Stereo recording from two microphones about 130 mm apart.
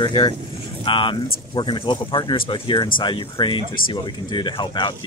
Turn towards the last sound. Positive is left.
turn(degrees=40)  # may be behind; listen again after turning